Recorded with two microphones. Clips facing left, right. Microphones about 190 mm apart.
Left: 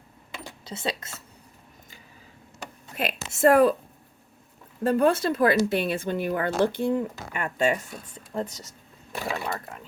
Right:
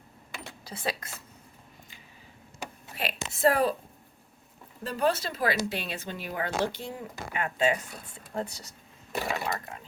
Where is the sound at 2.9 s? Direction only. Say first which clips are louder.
Left 5 dB; 50° left (ahead or behind).